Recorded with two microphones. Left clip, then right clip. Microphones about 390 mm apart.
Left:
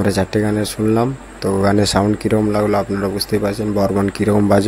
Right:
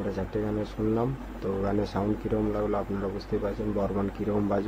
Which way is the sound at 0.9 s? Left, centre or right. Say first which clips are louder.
Left 11 dB; right.